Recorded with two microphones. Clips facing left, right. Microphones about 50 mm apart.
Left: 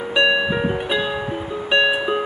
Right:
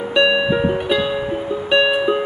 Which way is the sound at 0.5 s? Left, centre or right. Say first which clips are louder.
Right 3 dB; centre.